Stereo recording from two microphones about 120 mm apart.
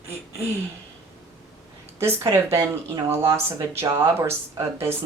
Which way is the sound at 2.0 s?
20° right (ahead or behind).